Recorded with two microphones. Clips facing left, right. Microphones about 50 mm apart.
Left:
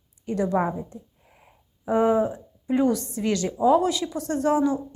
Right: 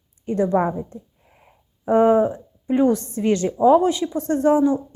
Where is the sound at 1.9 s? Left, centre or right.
Right.